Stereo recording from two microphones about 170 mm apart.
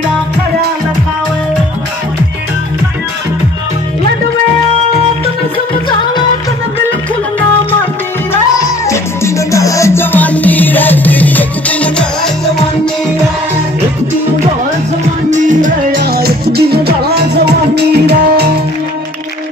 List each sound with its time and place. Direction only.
8.8 s music: 15° left (ahead or behind)
15.2 s music: 45° right (ahead or behind)
16.0 s music: 65° right (ahead or behind)